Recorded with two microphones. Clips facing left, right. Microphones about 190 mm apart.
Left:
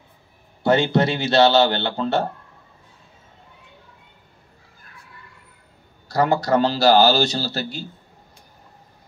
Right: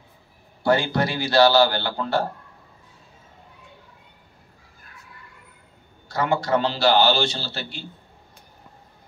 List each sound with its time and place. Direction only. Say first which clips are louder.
0.7 s a man's voice: left 3 dB; 20° left (ahead or behind)
6.0 s a man's voice: left 4 dB; 40° left (ahead or behind)